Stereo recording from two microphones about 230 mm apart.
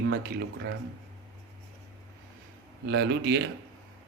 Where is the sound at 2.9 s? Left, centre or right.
Right.